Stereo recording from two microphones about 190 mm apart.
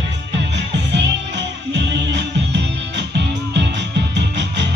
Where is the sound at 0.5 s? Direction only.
70° right (ahead or behind).